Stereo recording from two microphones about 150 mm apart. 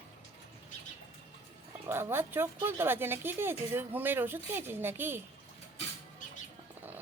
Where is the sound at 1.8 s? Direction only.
15° right (ahead or behind).